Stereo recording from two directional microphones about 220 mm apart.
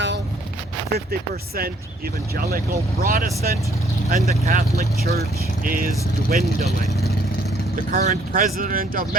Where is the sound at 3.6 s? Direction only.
15° left (ahead or behind).